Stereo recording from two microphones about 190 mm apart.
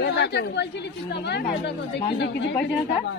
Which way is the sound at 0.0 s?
65° left (ahead or behind).